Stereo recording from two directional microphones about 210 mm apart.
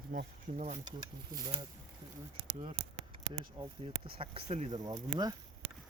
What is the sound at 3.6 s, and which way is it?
Speech, 25° right (ahead or behind).